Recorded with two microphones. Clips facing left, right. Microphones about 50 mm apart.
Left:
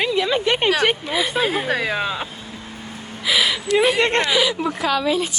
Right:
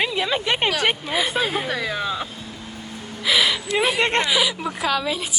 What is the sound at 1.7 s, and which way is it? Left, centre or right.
Speech, left.